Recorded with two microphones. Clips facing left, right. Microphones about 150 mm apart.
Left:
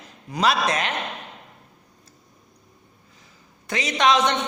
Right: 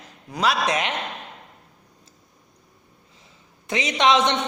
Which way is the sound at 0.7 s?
20° right (ahead or behind).